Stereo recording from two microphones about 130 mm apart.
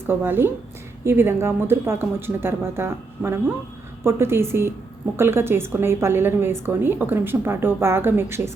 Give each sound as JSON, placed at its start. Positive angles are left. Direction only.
{"t": 0.0, "sound": "a woman's voice", "side_deg": -15}